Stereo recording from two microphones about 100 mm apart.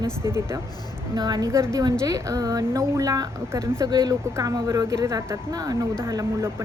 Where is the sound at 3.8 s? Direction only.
45° right (ahead or behind).